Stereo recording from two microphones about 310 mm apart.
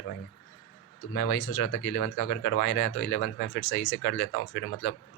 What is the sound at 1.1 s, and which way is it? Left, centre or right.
Speech, left.